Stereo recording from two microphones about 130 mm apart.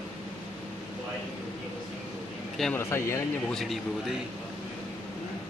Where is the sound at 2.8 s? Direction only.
20° left (ahead or behind).